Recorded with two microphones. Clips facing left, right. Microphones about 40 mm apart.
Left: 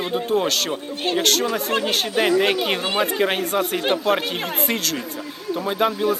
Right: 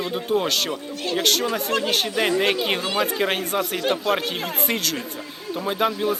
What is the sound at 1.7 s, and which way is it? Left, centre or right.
Speech, left.